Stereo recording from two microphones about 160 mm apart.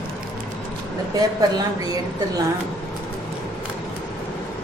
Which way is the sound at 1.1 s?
25° right (ahead or behind).